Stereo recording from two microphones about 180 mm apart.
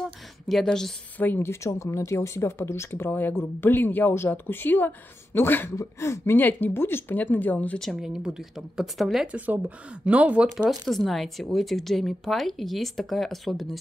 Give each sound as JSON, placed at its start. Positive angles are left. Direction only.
{"t": 0.5, "sound": "speech", "side_deg": 0}